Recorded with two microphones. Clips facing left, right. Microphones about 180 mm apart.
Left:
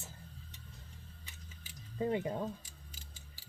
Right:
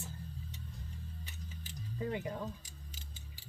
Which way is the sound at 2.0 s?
30° left (ahead or behind).